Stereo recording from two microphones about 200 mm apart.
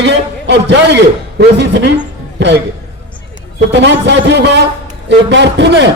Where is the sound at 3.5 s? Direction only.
65° right (ahead or behind).